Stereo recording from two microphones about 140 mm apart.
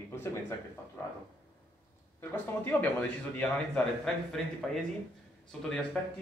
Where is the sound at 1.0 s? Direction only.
15° left (ahead or behind).